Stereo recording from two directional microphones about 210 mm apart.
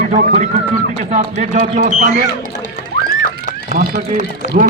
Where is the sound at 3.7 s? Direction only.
40° right (ahead or behind).